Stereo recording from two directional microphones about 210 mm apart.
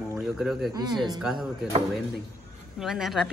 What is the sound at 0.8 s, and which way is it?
Speech, 20° right (ahead or behind).